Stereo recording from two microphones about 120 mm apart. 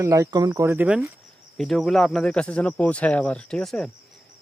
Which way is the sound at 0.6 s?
15° right (ahead or behind).